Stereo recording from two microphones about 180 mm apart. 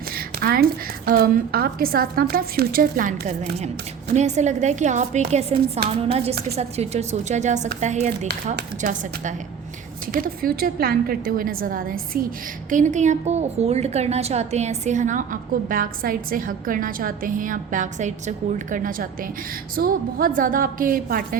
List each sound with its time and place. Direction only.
0.3 s a woman's voice: 55° right (ahead or behind)